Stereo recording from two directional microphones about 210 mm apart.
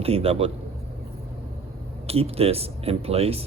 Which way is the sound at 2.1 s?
30° right (ahead or behind).